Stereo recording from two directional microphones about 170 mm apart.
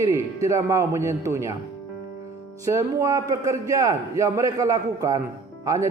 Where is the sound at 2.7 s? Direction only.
15° right (ahead or behind).